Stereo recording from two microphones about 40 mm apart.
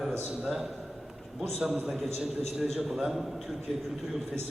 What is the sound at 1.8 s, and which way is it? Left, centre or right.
A man's voice, centre.